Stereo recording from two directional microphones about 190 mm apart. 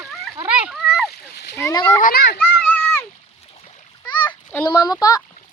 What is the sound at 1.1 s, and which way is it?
Splash, 60° left (ahead or behind).